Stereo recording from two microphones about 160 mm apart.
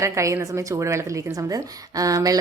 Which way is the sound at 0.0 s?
20° right (ahead or behind).